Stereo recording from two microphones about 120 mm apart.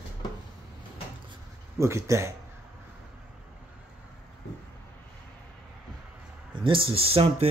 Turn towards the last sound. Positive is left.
turn(degrees=-55)  # may be behind; listen again after turning